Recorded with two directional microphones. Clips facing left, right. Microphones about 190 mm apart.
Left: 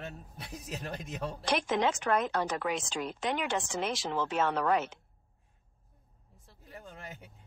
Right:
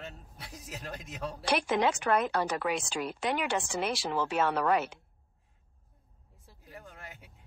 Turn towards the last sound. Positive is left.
turn(degrees=15)  # may be behind; listen again after turning